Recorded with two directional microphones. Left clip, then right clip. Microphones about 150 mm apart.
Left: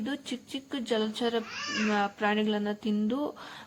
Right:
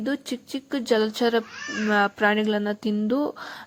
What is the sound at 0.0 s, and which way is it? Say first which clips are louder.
Speech: right 7 dB; 35° right (ahead or behind).